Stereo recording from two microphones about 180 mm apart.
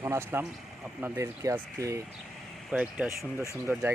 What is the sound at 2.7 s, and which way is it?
Speech, 5° right (ahead or behind).